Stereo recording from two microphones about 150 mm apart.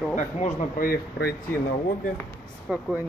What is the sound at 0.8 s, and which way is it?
Speech, 90° left.